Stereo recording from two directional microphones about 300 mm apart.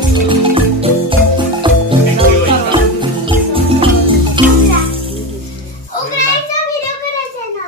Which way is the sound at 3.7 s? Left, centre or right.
Centre.